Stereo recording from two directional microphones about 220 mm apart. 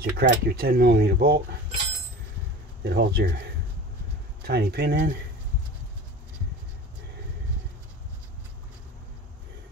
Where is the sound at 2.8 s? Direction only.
45° right (ahead or behind).